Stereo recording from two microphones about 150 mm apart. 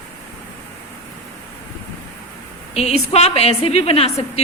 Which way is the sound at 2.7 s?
45° left (ahead or behind).